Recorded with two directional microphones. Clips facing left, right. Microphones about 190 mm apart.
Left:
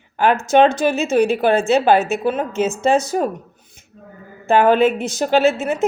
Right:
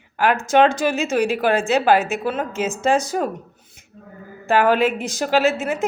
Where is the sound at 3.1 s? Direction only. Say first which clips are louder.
Left 3 dB; 30° left (ahead or behind).